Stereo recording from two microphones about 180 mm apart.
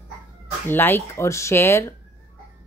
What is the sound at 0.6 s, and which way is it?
Speech, 10° left (ahead or behind).